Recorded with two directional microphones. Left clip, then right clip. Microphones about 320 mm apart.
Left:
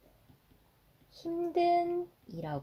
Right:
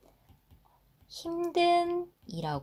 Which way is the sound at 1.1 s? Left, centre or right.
Right.